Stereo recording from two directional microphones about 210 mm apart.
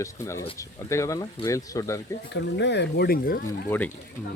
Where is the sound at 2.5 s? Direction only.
55° left (ahead or behind).